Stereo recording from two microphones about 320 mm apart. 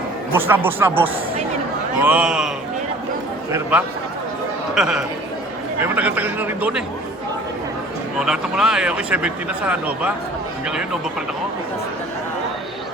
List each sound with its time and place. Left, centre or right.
0.3 s speech: centre
3.5 s speech: centre
8.2 s speech: centre